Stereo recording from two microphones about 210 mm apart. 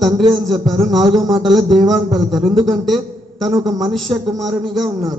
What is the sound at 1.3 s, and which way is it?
A man's voice, centre (ahead or behind).